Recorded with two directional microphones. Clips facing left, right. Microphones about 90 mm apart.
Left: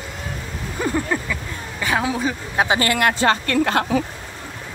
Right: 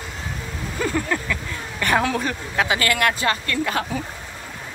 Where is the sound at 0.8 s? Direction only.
15° left (ahead or behind).